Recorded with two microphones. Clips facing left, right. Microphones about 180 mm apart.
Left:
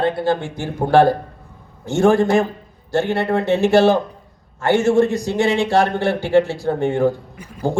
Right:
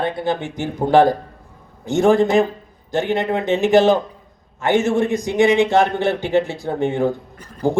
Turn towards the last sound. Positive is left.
turn(degrees=10)  # may be behind; listen again after turning